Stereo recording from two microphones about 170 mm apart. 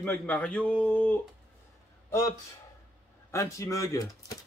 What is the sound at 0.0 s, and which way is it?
A man's voice, 10° left (ahead or behind).